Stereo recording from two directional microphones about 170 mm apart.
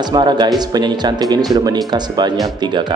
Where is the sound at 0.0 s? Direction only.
25° right (ahead or behind).